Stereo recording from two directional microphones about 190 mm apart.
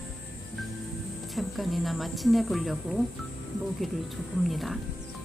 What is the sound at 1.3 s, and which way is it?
Speech, centre (ahead or behind).